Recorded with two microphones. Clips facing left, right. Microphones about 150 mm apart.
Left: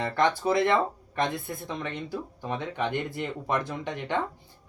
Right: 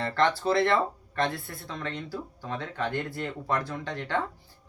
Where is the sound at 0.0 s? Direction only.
15° left (ahead or behind).